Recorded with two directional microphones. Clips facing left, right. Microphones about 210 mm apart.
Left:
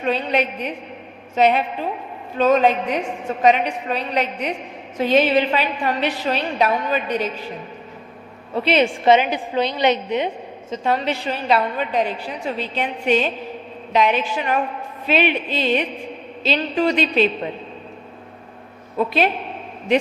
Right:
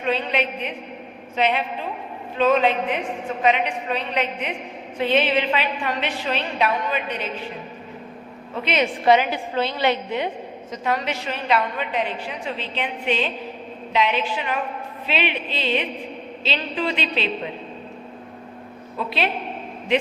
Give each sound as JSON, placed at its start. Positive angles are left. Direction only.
{"t": 0.0, "sound": "a woman's voice", "side_deg": 40}
{"t": 8.6, "sound": "a woman's voice", "side_deg": 30}
{"t": 18.9, "sound": "speech", "side_deg": 45}